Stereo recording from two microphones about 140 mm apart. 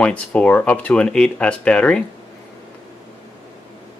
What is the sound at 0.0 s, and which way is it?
Speech, 10° left (ahead or behind).